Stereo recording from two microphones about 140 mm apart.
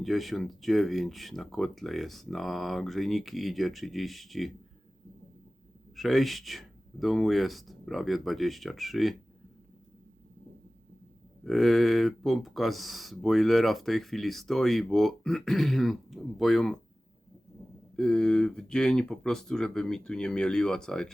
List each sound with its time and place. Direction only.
0.0 s speech: centre (ahead or behind)
6.0 s speech: centre (ahead or behind)
11.4 s speech: centre (ahead or behind)
17.9 s speech: 5° left (ahead or behind)